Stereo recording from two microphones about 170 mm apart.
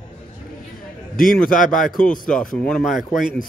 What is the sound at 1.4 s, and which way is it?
Speech, 50° left (ahead or behind).